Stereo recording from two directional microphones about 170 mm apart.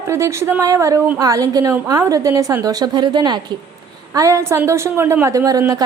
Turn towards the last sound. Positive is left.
turn(degrees=-20)  # may be behind; listen again after turning